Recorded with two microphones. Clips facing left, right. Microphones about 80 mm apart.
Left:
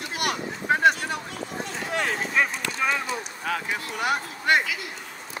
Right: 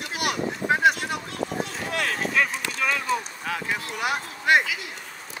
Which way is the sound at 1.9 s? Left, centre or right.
Left.